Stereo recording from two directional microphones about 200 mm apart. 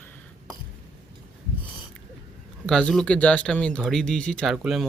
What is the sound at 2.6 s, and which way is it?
Speech, 5° left (ahead or behind).